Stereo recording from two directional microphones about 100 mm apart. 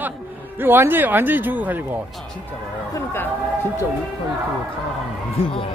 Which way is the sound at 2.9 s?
25° left (ahead or behind).